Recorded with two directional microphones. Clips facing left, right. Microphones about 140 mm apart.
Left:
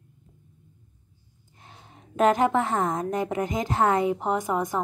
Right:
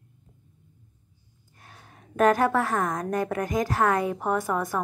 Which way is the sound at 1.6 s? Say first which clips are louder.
Left 1 dB; 20° left (ahead or behind).